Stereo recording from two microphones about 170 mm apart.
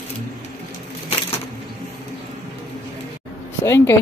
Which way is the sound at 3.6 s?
15° left (ahead or behind).